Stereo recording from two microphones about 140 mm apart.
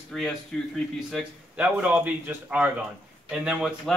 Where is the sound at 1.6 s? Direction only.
10° right (ahead or behind).